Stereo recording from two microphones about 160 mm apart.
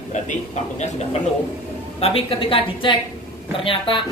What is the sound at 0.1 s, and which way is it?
A man's voice, 45° left (ahead or behind).